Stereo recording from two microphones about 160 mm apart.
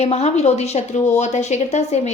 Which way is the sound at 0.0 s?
40° left (ahead or behind).